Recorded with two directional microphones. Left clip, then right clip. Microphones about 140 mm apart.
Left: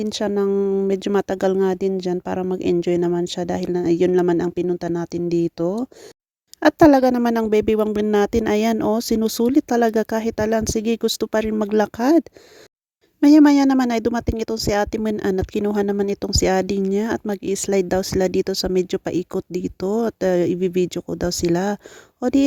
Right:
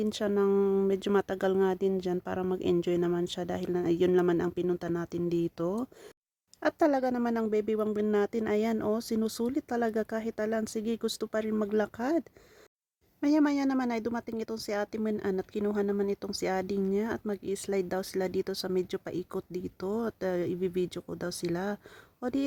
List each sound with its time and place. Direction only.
0.0 s speech: 45° left (ahead or behind)
0.5 s speech: 30° left (ahead or behind)
0.9 s speech: 45° left (ahead or behind)
6.6 s speech: 80° left
13.2 s speech: 70° left (ahead or behind)